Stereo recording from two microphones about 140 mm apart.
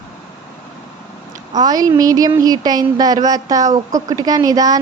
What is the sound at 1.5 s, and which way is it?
A woman's voice, 30° right (ahead or behind).